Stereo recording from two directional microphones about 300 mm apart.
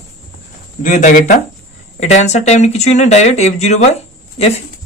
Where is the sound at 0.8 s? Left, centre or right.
Left.